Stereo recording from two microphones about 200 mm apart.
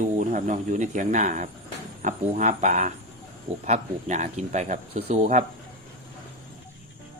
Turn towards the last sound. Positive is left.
turn(degrees=-35)  # may be behind; listen again after turning